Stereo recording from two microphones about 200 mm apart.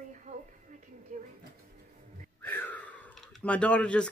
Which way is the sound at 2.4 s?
10° left (ahead or behind).